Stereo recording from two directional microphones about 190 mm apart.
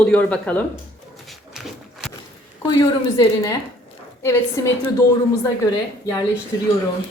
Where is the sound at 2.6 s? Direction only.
20° left (ahead or behind).